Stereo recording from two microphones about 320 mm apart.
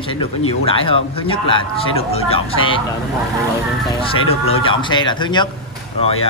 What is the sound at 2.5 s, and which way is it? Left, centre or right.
Speech, left.